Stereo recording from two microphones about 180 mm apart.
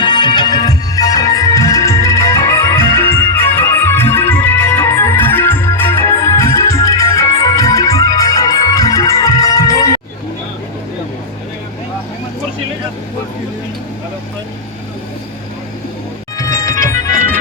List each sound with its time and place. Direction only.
0.0 s music: 25° left (ahead or behind)
16.4 s music: 15° left (ahead or behind)